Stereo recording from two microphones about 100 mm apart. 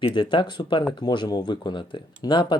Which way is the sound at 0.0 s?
55° left (ahead or behind).